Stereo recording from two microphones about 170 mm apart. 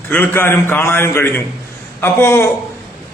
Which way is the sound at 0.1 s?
10° left (ahead or behind).